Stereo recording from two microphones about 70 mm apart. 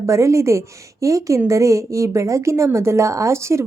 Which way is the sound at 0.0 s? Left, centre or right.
Right.